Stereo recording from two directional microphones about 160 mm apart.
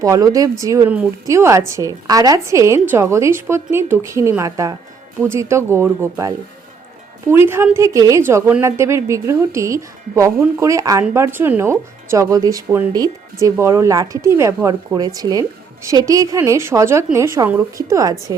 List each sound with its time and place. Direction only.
0.0 s a woman's voice: 20° right (ahead or behind)